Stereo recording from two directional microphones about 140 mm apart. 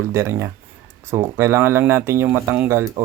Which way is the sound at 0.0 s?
20° right (ahead or behind).